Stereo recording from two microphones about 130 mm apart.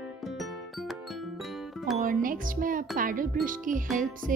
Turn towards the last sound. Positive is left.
turn(degrees=-90)